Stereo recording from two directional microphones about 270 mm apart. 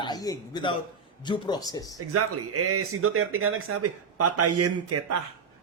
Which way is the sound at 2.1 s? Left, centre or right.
Right.